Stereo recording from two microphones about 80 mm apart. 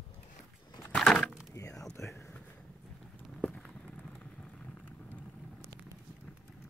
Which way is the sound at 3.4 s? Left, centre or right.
Centre.